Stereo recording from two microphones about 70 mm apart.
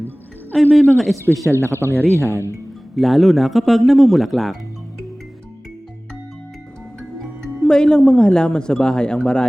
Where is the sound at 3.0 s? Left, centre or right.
Centre.